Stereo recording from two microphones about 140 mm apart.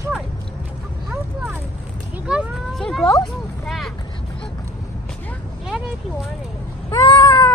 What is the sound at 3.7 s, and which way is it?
Vehicle, centre (ahead or behind).